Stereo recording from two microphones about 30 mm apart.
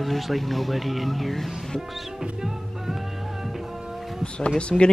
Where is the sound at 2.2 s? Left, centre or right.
Centre.